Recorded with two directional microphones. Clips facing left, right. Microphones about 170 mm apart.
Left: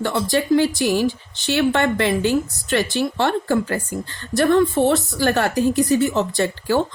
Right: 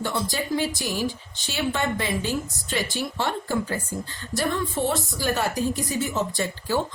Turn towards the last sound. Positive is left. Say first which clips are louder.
# left 6 dB
turn(degrees=70)  # may be behind; listen again after turning